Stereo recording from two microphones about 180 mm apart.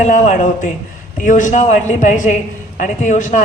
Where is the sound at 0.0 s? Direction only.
45° left (ahead or behind).